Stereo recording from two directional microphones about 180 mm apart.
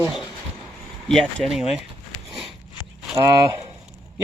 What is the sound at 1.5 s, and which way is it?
Speech, 5° right (ahead or behind).